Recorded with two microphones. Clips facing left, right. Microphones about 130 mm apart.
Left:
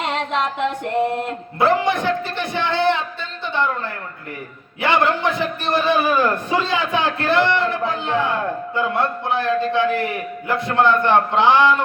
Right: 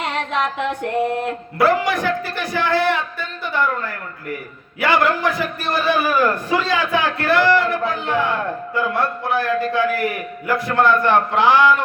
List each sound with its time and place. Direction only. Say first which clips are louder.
1.5 s a man's voice: even; 25° left (ahead or behind)
4.8 s a man's voice: right 1 dB; 25° left (ahead or behind)